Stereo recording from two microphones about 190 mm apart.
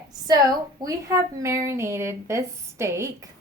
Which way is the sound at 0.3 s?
20° right (ahead or behind).